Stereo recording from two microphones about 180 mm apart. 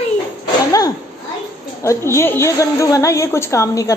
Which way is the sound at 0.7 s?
20° left (ahead or behind).